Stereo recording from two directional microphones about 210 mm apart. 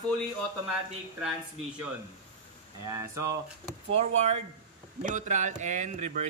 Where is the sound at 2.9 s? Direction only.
15° right (ahead or behind).